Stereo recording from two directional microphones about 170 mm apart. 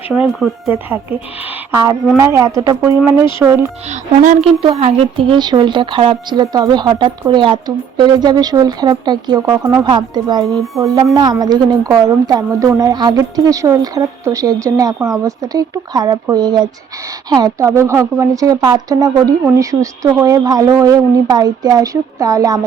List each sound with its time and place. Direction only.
0.1 s speech: centre (ahead or behind)
1.7 s speech: 20° right (ahead or behind)
4.2 s a woman's voice: 50° right (ahead or behind)
4.6 s speech: 35° right (ahead or behind)